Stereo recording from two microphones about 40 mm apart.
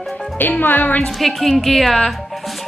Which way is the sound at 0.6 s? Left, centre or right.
Left.